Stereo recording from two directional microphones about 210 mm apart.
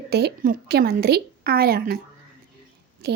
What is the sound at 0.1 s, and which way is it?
Speech, 50° right (ahead or behind).